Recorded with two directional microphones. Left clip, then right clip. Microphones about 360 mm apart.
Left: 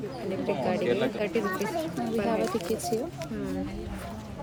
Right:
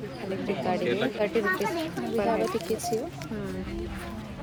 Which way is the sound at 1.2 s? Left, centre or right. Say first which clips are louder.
Right 3 dB; centre.